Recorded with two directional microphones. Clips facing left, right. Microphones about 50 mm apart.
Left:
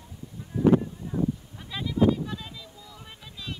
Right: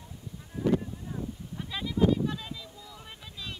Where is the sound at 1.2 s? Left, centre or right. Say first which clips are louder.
Left 11 dB; left.